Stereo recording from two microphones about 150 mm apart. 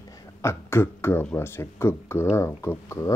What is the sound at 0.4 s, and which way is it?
Speech, 15° left (ahead or behind).